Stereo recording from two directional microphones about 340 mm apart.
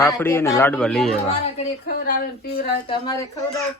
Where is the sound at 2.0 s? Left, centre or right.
Left.